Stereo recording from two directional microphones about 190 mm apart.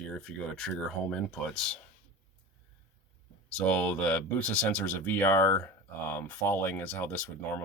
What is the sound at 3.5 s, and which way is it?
Speech, 5° left (ahead or behind).